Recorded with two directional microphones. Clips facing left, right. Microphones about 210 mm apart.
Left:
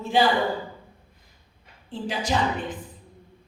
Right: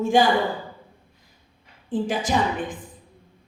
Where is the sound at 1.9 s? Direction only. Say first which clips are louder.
Right 6 dB; 50° right (ahead or behind).